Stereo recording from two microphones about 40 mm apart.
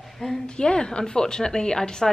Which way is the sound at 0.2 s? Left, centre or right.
Left.